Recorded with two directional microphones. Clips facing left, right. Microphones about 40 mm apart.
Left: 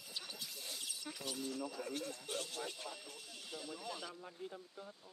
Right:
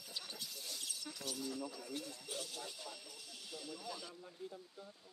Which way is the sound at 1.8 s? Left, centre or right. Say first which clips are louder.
Left 4 dB; left.